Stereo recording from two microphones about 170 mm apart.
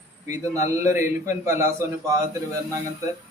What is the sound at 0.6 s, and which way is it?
Speech, 45° left (ahead or behind).